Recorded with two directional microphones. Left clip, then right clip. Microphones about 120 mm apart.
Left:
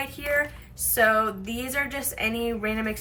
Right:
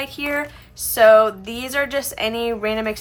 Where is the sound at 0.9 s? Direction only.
45° right (ahead or behind).